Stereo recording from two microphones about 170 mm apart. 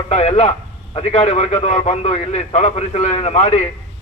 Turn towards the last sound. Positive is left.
turn(degrees=40)  # may be behind; listen again after turning